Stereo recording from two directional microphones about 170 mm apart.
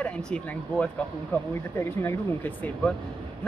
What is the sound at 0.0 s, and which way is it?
Speech, 5° left (ahead or behind).